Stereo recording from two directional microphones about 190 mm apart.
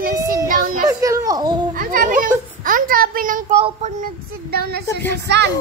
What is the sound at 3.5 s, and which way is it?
Speech, 30° right (ahead or behind).